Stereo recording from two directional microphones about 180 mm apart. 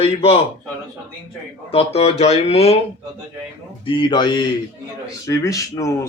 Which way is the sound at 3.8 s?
25° left (ahead or behind).